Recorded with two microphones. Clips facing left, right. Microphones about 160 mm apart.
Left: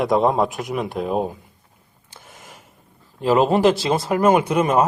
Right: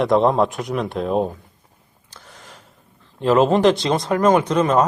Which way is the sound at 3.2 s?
Centre (ahead or behind).